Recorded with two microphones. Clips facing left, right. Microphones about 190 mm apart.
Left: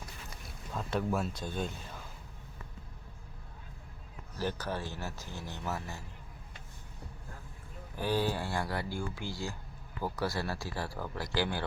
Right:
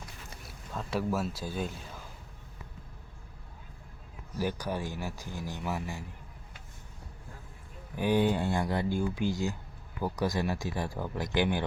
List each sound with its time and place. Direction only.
0.7 s speech: centre (ahead or behind)
4.4 s speech: 15° right (ahead or behind)
7.9 s speech: 15° right (ahead or behind)